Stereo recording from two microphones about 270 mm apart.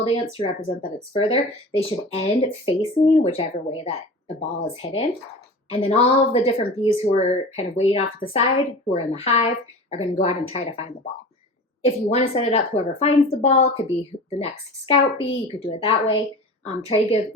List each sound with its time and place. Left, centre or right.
0.0 s a woman's voice: left
11.9 s a woman's voice: left